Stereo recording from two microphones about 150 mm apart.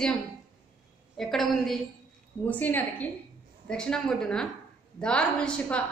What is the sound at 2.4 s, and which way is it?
A woman's voice, 10° left (ahead or behind).